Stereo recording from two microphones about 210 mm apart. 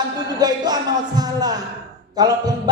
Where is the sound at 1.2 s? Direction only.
20° right (ahead or behind).